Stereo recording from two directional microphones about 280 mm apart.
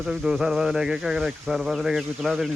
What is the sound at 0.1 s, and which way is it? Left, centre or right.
Speech, centre.